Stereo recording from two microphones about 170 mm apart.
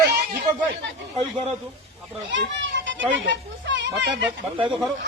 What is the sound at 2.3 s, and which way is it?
Children playing, 90° right.